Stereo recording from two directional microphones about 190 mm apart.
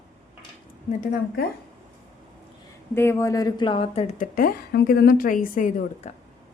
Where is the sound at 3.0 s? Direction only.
15° left (ahead or behind); by 4.2 s 30° left (ahead or behind).